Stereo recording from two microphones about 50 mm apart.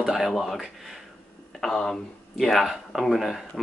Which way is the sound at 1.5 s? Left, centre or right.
Centre.